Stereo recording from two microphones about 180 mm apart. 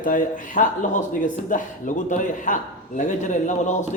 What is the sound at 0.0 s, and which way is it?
A man's voice, 50° left (ahead or behind).